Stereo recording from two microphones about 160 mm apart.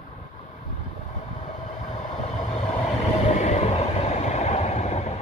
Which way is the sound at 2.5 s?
40° left (ahead or behind).